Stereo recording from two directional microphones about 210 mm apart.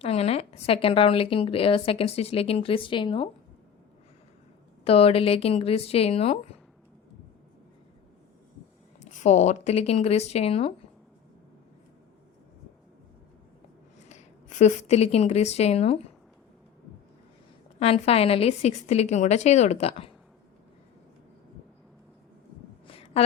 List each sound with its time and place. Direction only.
0.0 s a woman's voice: 30° left (ahead or behind)
4.9 s a woman's voice: 30° left (ahead or behind)
9.0 s a woman's voice: 35° left (ahead or behind)
14.1 s speech: 35° left (ahead or behind)
17.7 s a woman's voice: 30° left (ahead or behind)
22.9 s a sound: 25° left (ahead or behind)